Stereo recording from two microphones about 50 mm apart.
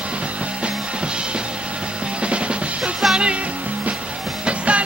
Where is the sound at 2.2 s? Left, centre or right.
Right.